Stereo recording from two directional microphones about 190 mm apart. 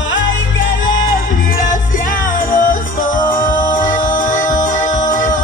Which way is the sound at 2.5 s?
45° left (ahead or behind).